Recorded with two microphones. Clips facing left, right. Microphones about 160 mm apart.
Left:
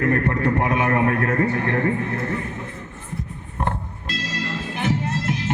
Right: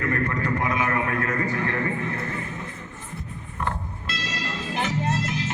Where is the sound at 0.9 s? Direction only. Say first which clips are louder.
Left 6 dB; 50° left (ahead or behind).